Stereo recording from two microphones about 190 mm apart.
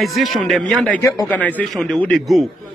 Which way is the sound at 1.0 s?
20° left (ahead or behind).